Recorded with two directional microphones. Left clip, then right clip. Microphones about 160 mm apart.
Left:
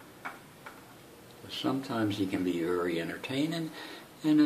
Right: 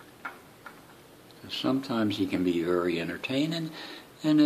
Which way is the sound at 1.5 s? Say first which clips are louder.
Right 3 dB; 55° right (ahead or behind).